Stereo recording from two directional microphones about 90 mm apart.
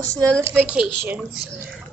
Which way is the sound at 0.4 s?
30° right (ahead or behind).